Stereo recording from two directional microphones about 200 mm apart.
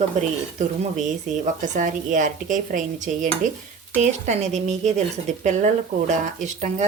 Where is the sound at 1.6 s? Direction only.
40° right (ahead or behind).